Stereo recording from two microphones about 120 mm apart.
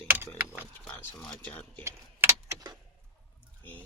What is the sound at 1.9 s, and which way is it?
Keys jangling, 25° right (ahead or behind).